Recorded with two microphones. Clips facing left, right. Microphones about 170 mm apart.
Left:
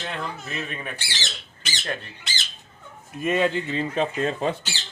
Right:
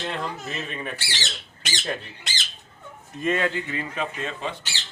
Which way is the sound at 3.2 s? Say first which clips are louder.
Left 2 dB; 20° left (ahead or behind).